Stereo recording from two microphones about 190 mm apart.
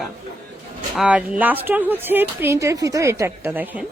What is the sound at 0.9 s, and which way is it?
Speech, 5° right (ahead or behind).